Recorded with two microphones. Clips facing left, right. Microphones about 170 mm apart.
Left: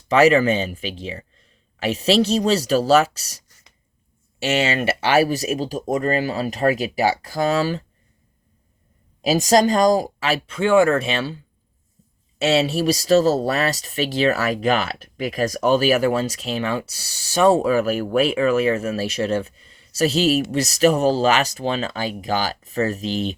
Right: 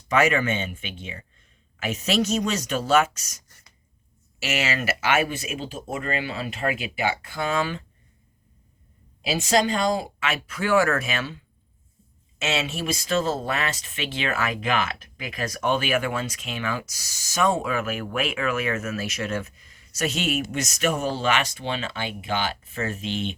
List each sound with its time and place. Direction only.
0.1 s speech: 35° left (ahead or behind)
9.2 s speech: 40° left (ahead or behind)